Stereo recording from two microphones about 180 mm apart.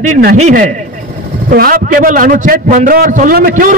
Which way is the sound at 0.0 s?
55° right (ahead or behind).